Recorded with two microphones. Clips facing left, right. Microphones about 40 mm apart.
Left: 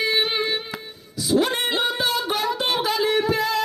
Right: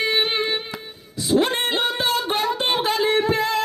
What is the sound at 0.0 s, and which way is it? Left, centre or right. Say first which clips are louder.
Music: right 1 dB; right.